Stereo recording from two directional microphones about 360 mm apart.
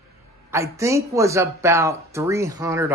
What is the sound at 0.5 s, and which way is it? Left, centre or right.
Speech, centre.